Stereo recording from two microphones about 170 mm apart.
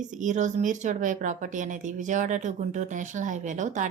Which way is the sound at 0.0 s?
45° right (ahead or behind).